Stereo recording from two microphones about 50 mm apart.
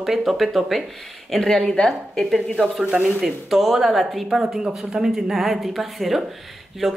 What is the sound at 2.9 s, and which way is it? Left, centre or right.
Speech, right.